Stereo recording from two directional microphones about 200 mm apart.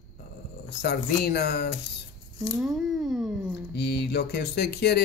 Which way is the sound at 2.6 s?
Centre (ahead or behind).